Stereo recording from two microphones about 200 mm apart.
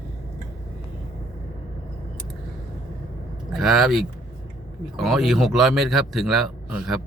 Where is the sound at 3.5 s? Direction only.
Centre (ahead or behind).